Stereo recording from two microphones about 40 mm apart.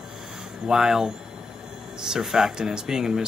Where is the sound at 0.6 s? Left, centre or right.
Centre.